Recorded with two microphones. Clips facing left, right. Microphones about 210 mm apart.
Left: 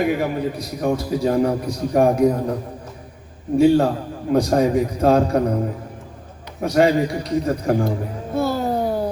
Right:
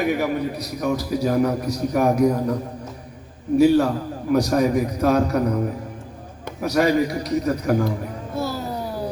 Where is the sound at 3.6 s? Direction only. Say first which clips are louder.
Left 1 dB; 30° left (ahead or behind).